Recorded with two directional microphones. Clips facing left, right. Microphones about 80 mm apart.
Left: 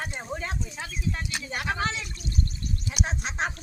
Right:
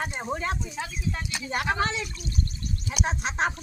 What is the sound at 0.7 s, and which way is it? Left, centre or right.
Speech, centre.